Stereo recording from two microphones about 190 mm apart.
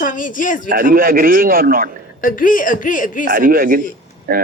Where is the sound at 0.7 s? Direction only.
50° right (ahead or behind).